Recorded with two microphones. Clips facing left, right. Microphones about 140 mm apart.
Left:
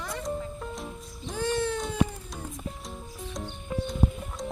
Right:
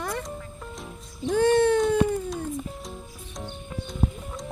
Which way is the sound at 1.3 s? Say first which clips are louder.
Right 9 dB; 60° right (ahead or behind).